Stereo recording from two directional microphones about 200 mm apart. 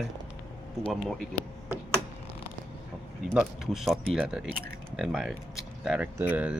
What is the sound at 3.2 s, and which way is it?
Speech, 5° right (ahead or behind).